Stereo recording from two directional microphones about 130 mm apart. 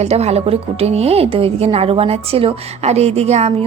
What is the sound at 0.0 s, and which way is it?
A woman's voice, 55° right (ahead or behind).